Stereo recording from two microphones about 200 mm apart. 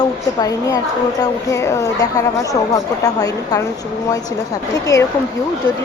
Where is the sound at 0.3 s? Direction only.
15° left (ahead or behind).